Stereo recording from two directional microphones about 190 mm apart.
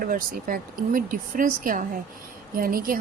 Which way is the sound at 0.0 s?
45° right (ahead or behind).